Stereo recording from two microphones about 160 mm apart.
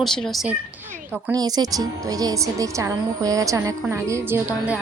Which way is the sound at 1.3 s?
25° right (ahead or behind).